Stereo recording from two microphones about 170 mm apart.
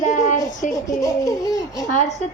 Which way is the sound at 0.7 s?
20° left (ahead or behind).